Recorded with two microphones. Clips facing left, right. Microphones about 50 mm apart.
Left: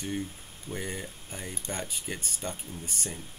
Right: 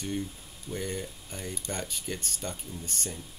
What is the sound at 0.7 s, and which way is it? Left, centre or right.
Speech, centre.